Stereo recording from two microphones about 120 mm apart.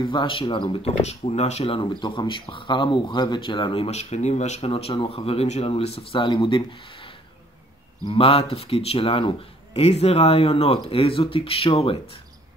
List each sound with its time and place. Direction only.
0.0 s speech: 40° left (ahead or behind)
9.8 s speech: 60° left (ahead or behind)